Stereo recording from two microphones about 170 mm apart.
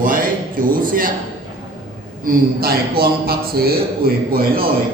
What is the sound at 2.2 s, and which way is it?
A man's voice, 60° right (ahead or behind).